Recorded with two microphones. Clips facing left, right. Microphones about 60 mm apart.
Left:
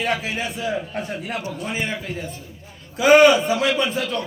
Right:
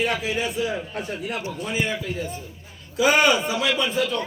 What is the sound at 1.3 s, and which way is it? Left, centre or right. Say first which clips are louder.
Speech: left 1 dB; left.